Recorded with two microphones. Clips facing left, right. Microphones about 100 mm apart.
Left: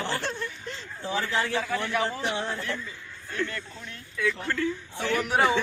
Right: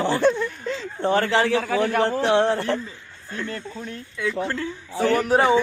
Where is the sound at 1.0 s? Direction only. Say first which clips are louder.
Right 8 dB; 60° right (ahead or behind); by 1.6 s 85° right.